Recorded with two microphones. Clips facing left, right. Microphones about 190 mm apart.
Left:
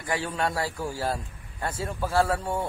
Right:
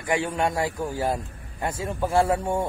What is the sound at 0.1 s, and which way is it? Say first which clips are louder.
A man's voice: right 4 dB; 20° right (ahead or behind).